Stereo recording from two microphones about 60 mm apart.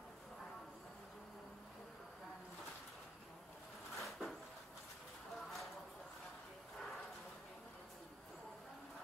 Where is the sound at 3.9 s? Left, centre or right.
Centre.